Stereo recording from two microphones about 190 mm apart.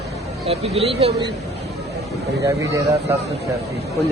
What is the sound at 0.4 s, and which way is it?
Speech, 30° right (ahead or behind).